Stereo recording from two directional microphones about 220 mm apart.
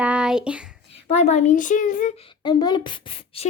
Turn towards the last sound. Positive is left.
turn(degrees=25)  # may be behind; listen again after turning